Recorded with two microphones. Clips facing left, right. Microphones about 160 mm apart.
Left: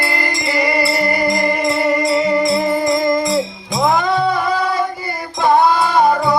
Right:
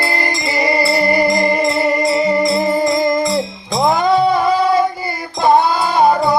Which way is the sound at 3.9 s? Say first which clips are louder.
Right 3 dB; 35° right (ahead or behind).